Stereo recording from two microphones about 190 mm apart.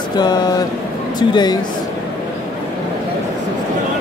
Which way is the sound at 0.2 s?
20° left (ahead or behind).